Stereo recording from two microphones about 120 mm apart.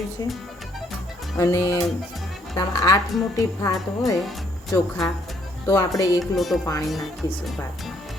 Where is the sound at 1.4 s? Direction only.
25° left (ahead or behind).